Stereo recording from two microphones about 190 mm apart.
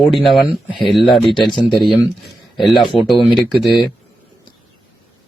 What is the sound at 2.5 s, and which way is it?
Speech, centre (ahead or behind).